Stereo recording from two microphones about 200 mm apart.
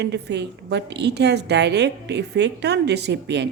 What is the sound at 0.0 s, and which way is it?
A woman's voice, 60° right (ahead or behind).